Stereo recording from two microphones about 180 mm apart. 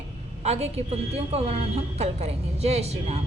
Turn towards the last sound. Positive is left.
turn(degrees=-35)  # may be behind; listen again after turning